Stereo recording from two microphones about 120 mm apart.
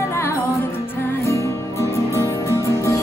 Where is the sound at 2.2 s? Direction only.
25° left (ahead or behind).